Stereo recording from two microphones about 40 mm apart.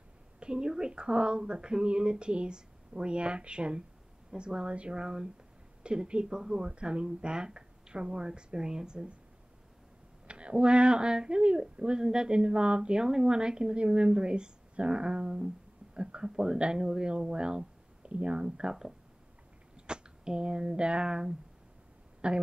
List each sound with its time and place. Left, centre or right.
0.4 s speech: right
10.2 s speech: right
22.2 s speech: right